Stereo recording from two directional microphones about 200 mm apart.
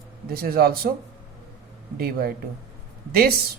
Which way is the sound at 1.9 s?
50° right (ahead or behind).